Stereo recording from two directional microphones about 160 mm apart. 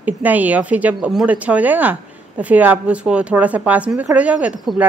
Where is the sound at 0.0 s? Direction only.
10° right (ahead or behind).